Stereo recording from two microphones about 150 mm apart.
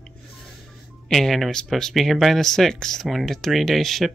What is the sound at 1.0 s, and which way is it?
Speech, centre (ahead or behind).